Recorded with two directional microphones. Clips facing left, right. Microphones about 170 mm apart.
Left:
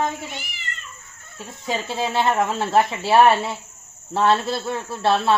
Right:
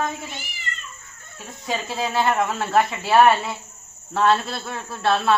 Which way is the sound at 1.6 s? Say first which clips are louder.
Left 1 dB; 25° left (ahead or behind).